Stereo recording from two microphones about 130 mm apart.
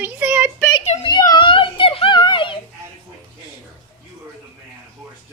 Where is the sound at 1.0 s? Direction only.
30° left (ahead or behind).